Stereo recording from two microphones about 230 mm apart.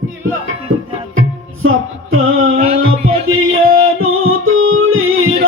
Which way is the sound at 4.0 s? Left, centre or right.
Right.